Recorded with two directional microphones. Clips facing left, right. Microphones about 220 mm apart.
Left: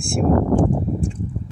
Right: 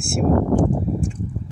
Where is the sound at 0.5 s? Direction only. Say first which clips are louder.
Left 1 dB; 30° left (ahead or behind).